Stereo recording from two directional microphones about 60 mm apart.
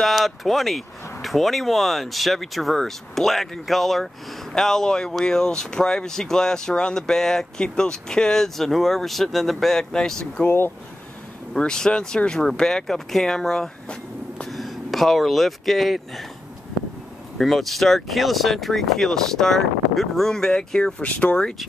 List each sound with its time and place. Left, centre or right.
0.0 s speech: centre
10.4 s speech: left
11.5 s speech: centre
17.4 s speech: centre
21.0 s speech: left